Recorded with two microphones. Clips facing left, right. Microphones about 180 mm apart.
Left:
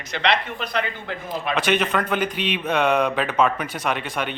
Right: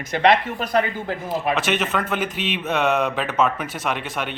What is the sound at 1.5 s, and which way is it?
Speech, 5° right (ahead or behind).